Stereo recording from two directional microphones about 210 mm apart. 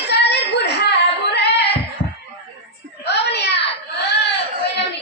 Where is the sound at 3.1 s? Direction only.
55° left (ahead or behind).